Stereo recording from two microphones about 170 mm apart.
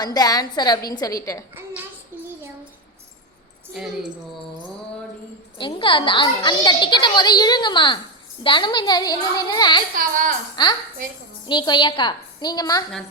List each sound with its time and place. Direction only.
0.0 s a child's voice: 25° left (ahead or behind)
3.8 s speech: centre (ahead or behind)
5.5 s a child's voice: 30° left (ahead or behind)
9.9 s speech: 50° right (ahead or behind)
10.5 s a child's voice: 25° left (ahead or behind)